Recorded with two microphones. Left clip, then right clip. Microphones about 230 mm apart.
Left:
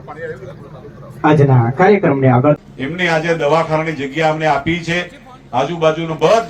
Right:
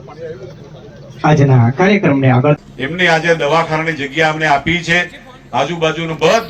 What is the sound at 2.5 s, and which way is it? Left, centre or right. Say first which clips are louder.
A man's voice: even; left.